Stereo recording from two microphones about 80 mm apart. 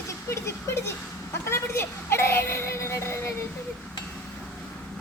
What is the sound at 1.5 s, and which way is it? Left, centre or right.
Child singing, left.